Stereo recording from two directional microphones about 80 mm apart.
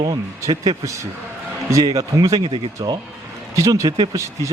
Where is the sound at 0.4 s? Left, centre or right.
Right.